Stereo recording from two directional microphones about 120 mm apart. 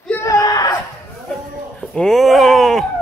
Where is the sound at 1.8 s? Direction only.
5° left (ahead or behind).